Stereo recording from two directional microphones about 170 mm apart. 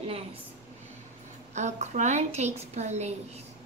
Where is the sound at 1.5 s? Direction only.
45° right (ahead or behind).